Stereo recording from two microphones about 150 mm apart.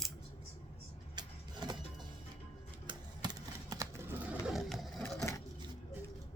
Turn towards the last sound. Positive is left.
turn(degrees=20)  # may be behind; listen again after turning